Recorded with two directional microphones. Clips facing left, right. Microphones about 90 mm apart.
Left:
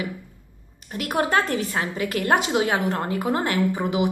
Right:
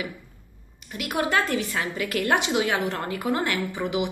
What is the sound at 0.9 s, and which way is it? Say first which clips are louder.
A woman's voice: left 3 dB; 35° left (ahead or behind).